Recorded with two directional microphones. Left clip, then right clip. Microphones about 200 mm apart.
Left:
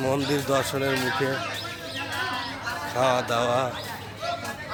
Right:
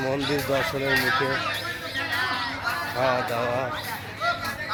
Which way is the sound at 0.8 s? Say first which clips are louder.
Right 3 dB; 10° left (ahead or behind).